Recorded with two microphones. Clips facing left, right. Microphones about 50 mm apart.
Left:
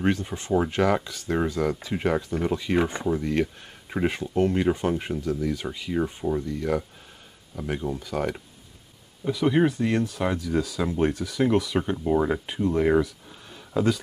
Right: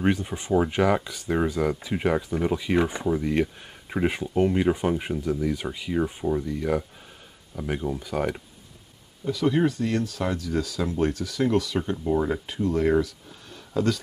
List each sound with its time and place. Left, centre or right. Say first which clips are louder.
0.0 s speech: right 1 dB; centre
9.2 s speech: left 1 dB; centre